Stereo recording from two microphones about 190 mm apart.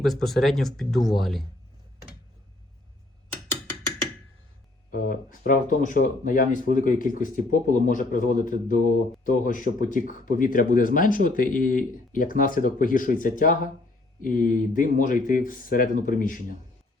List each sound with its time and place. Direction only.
0.0 s speech: centre (ahead or behind)
4.9 s speech: 45° left (ahead or behind)